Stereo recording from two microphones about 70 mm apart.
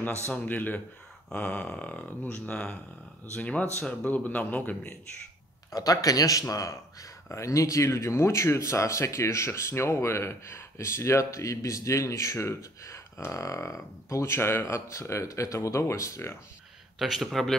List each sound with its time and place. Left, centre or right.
0.3 s speech: left
5.7 s speech: left
17.0 s speech: centre